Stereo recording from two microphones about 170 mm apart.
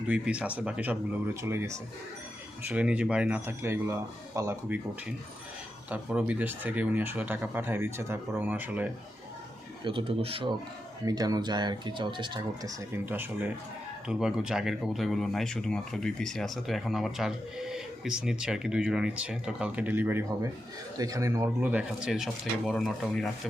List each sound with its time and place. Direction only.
0.1 s speech: 5° right (ahead or behind)
5.9 s speech: 5° right (ahead or behind)
9.8 s speech: 30° right (ahead or behind)
11.0 s speech: 20° right (ahead or behind)
13.1 s speech: 10° right (ahead or behind)